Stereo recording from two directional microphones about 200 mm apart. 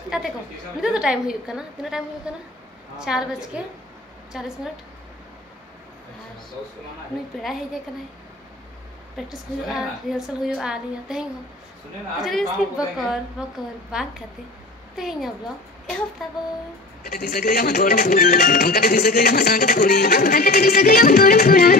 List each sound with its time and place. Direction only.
0.1 s a woman's voice: 5° right (ahead or behind)
9.1 s a woman's voice: centre (ahead or behind)
17.0 s speech: 45° left (ahead or behind)